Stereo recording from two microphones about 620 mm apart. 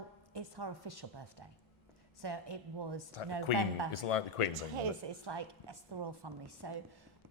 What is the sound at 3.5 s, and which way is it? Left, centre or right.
Speech, left.